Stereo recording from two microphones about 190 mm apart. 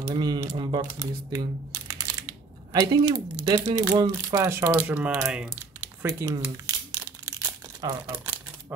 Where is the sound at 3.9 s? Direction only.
15° right (ahead or behind).